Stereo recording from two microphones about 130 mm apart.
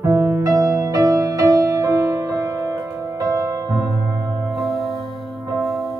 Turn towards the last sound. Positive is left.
turn(degrees=0)  # may be behind; listen again after turning